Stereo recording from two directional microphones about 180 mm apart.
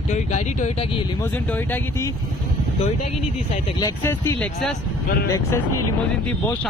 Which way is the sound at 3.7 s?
15° left (ahead or behind).